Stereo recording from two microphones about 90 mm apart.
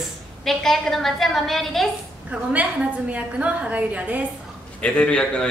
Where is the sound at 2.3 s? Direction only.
15° right (ahead or behind).